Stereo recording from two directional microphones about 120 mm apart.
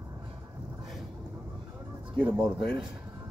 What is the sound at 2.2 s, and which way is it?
Speech, 5° right (ahead or behind).